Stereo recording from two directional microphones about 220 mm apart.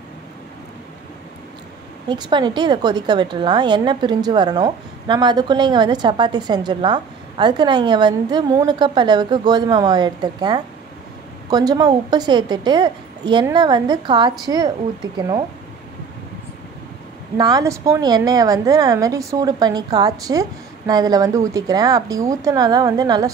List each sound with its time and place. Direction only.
2.0 s a woman's voice: 20° right (ahead or behind)
17.4 s a woman's voice: 15° right (ahead or behind)